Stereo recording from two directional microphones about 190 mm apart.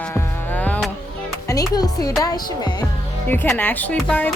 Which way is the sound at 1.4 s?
20° left (ahead or behind).